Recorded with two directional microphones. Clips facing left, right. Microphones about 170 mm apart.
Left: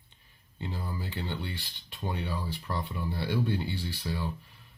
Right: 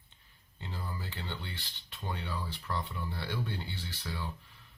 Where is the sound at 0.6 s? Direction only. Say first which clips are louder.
Left 5 dB; 15° left (ahead or behind).